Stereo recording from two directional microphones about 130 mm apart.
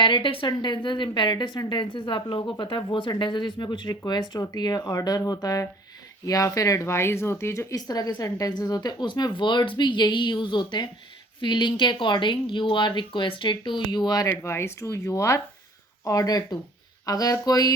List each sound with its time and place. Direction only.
0.0 s a woman's voice: 40° left (ahead or behind)
14.3 s speech: 20° left (ahead or behind)